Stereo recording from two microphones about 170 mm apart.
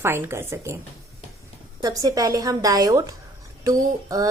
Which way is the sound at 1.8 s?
20° right (ahead or behind).